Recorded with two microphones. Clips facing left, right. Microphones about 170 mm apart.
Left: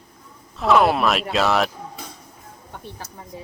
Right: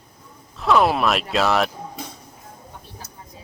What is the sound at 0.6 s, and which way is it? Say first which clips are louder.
Speech: left 1 dB; centre (ahead or behind).